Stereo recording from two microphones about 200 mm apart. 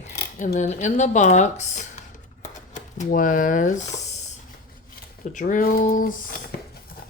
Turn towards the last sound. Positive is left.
turn(degrees=45)  # may be behind; listen again after turning